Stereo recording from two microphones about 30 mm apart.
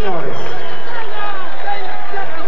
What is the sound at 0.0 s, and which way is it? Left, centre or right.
Run, left.